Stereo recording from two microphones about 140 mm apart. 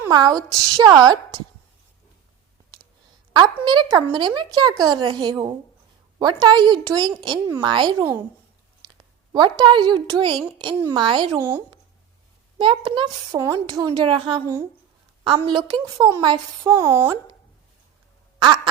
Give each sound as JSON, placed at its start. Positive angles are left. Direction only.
{"t": 0.1, "sound": "a woman's voice", "side_deg": -30}
{"t": 3.3, "sound": "speech", "side_deg": -30}
{"t": 9.3, "sound": "speech", "side_deg": -30}
{"t": 11.3, "sound": "speech", "side_deg": -15}
{"t": 12.5, "sound": "a woman's voice", "side_deg": -35}
{"t": 18.3, "sound": "quack", "side_deg": -35}